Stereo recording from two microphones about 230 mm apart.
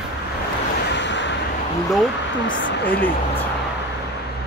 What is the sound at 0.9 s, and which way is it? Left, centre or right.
Vehicle, left.